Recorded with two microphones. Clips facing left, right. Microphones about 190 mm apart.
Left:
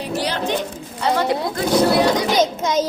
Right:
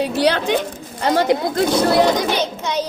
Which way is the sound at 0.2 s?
70° right (ahead or behind).